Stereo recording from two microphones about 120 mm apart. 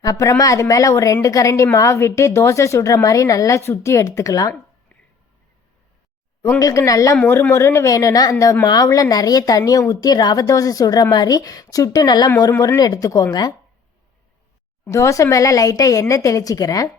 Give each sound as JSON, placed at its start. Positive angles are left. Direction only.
{"t": 0.0, "sound": "a woman's voice", "side_deg": 30}
{"t": 6.6, "sound": "a woman's voice", "side_deg": 30}
{"t": 14.8, "sound": "a woman's voice", "side_deg": 25}